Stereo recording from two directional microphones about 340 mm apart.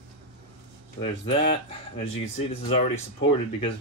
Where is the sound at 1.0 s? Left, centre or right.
Centre.